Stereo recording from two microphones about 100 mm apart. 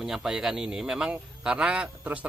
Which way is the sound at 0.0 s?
5° right (ahead or behind).